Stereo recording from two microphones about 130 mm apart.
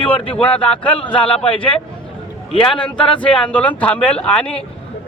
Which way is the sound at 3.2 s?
10° left (ahead or behind).